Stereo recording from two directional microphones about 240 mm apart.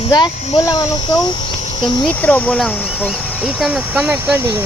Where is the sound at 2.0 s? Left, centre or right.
Centre.